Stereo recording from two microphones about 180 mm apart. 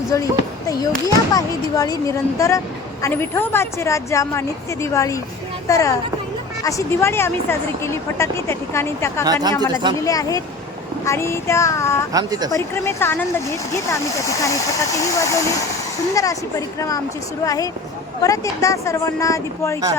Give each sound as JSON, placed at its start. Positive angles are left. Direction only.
{"t": 0.1, "sound": "speech", "side_deg": 20}
{"t": 9.2, "sound": "speech", "side_deg": -20}
{"t": 10.0, "sound": "speech", "side_deg": 20}
{"t": 12.1, "sound": "speech", "side_deg": -20}
{"t": 12.5, "sound": "speech", "side_deg": 15}